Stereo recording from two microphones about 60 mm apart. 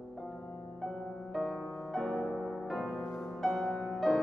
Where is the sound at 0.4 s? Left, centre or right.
Left.